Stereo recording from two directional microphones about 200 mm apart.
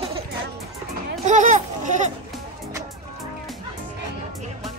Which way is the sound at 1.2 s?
40° right (ahead or behind).